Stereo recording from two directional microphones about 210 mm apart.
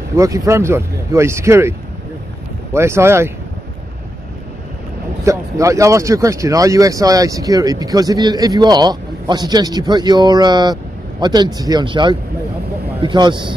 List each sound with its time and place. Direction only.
0.1 s speech: 15° right (ahead or behind)
5.2 s speech: 15° right (ahead or behind)